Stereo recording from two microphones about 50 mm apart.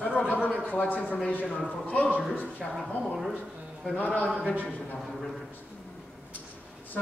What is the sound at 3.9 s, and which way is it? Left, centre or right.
Speech, left.